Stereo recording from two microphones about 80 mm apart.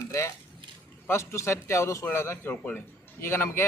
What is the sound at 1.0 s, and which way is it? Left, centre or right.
A man's voice, left.